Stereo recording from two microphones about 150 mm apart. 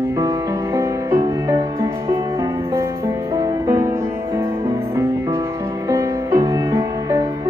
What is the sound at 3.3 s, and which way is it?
Music, 25° right (ahead or behind).